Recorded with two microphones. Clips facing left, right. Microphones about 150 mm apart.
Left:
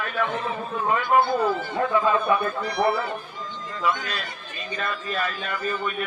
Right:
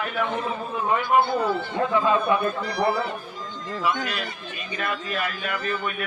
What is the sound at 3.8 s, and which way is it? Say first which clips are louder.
Speech: even; 15° right (ahead or behind).